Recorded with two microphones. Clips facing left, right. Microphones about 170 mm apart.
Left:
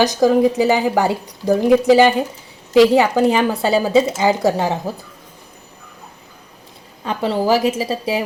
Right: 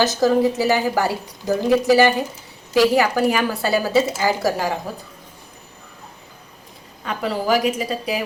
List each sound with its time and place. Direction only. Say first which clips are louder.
0.0 s a woman's voice: left 3 dB; 15° left (ahead or behind)
7.0 s a woman's voice: left 4 dB; 30° left (ahead or behind)